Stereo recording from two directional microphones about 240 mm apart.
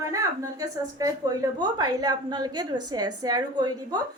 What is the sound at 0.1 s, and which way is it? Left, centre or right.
A woman's voice, centre.